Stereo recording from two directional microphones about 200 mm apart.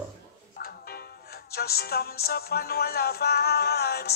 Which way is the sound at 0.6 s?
50° left (ahead or behind).